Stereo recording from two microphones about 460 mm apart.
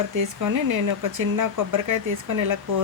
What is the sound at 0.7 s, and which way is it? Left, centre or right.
A woman's voice, right.